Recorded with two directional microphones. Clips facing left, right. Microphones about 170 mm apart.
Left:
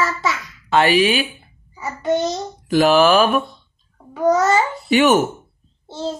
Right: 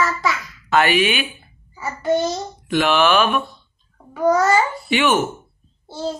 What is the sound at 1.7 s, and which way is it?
Speech, 20° left (ahead or behind).